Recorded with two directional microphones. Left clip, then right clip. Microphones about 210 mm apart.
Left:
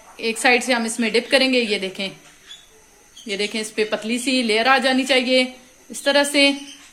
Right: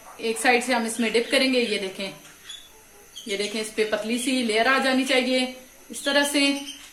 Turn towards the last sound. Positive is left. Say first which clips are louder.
# left 5 dB
turn(degrees=35)  # may be behind; listen again after turning